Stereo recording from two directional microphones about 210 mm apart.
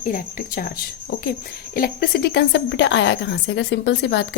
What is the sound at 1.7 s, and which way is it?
A woman's voice, 45° left (ahead or behind).